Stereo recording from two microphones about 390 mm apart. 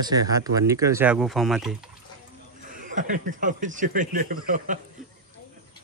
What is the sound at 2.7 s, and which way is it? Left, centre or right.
Speech, centre.